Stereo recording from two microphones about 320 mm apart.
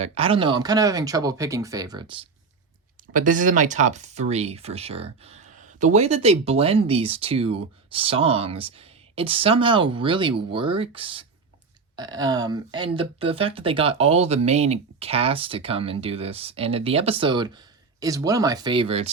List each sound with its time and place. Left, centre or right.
0.0 s speech: centre